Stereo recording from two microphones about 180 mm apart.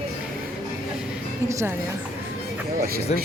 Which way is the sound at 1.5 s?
15° right (ahead or behind).